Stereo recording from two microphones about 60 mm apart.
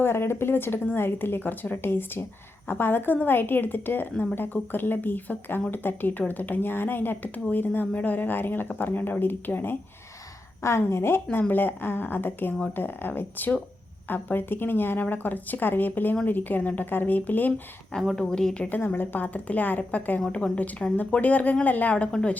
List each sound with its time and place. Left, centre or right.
0.0 s speech: left
10.6 s a woman's voice: left
11.3 s speech: left
18.2 s a woman's voice: centre
18.9 s a woman's voice: left; by 20.9 s centre
20.9 s a woman's voice: left
21.9 s a woman's voice: centre